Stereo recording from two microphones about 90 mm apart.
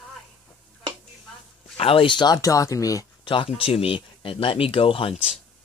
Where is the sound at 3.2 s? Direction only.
70° left (ahead or behind).